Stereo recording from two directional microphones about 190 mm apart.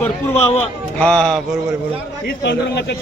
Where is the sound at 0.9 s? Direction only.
5° left (ahead or behind).